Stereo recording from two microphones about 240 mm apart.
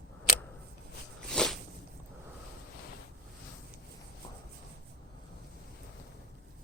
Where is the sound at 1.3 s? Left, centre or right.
Centre.